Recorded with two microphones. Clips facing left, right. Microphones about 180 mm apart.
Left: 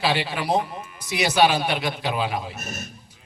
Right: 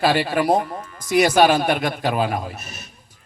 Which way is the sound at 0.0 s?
50° right (ahead or behind).